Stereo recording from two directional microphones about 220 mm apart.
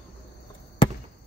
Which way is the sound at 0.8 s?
25° left (ahead or behind).